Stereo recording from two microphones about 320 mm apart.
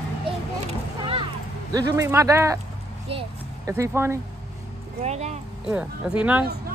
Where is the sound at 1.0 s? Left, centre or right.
Centre.